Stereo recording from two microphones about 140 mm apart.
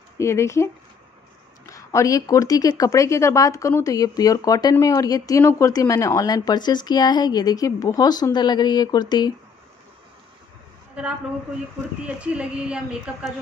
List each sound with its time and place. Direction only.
0.2 s speech: 20° left (ahead or behind)
1.7 s speech: 20° left (ahead or behind)
12.2 s a woman's voice: 10° right (ahead or behind)